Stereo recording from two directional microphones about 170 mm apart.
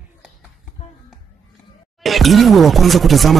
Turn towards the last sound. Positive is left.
turn(degrees=0)  # may be behind; listen again after turning